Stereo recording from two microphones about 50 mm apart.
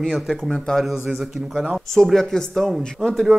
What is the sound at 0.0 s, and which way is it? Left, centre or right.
Speech, centre.